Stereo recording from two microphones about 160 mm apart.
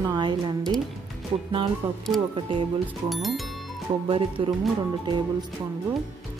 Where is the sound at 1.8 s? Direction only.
35° right (ahead or behind).